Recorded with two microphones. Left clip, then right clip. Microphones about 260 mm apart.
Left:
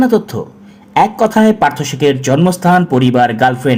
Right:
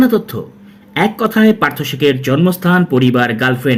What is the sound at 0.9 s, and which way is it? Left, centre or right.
Speech, left.